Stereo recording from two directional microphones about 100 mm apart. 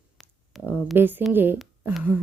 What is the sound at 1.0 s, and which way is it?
Speech, 20° right (ahead or behind).